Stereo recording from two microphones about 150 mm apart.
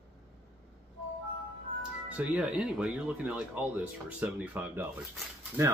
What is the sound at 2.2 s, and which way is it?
Speech, 5° right (ahead or behind).